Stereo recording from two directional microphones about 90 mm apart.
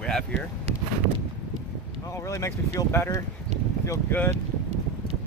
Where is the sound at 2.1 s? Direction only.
35° left (ahead or behind).